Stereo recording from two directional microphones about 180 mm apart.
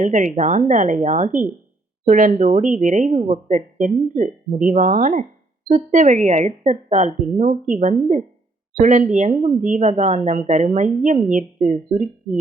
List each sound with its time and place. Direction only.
0.0 s speech: 45° right (ahead or behind)